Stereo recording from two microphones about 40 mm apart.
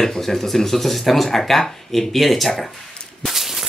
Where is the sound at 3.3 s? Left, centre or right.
Centre.